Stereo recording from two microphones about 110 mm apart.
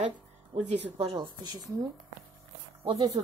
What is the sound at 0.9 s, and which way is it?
Speech, 50° right (ahead or behind).